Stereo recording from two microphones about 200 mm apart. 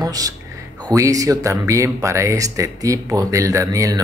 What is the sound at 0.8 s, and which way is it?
Speech, 15° right (ahead or behind).